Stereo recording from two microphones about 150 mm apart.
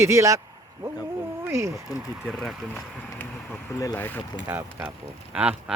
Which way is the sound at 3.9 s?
15° left (ahead or behind).